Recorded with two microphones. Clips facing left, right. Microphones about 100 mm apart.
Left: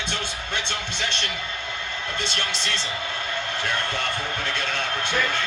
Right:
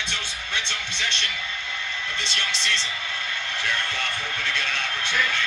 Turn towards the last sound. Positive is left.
turn(degrees=40)  # may be behind; listen again after turning